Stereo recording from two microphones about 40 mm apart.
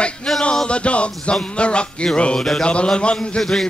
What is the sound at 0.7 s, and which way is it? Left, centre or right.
Music, left.